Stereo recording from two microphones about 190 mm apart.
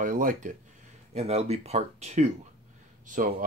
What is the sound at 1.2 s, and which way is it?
Speech, 35° right (ahead or behind).